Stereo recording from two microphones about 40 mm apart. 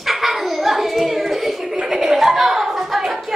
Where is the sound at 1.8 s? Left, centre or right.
Centre.